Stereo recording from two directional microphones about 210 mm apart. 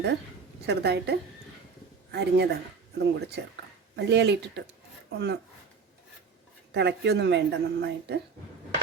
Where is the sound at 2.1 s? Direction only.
50° right (ahead or behind).